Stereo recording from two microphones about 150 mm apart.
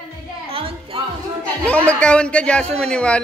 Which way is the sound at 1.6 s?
10° left (ahead or behind).